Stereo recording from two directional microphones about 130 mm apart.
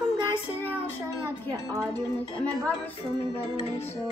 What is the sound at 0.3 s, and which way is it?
Child singing, 15° left (ahead or behind).